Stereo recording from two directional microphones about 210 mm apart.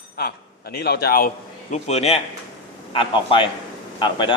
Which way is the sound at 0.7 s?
50° left (ahead or behind).